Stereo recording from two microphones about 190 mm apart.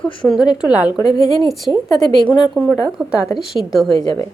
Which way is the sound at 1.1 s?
20° left (ahead or behind).